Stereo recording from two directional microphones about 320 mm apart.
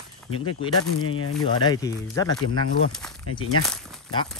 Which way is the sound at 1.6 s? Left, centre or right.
Centre.